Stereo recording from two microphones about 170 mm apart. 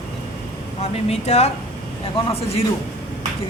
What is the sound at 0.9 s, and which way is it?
A man's voice, 40° left (ahead or behind).